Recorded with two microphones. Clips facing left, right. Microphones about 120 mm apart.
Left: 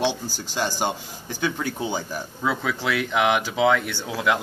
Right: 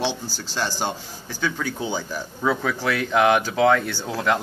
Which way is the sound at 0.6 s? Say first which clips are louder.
Left 1 dB; 15° left (ahead or behind).